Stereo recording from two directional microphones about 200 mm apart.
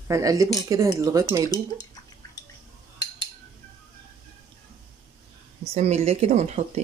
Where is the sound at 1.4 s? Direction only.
20° left (ahead or behind).